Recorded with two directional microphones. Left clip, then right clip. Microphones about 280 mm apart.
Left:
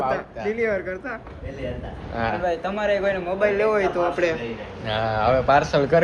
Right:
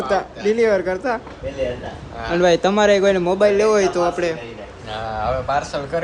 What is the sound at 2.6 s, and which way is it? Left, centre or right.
Speech, right.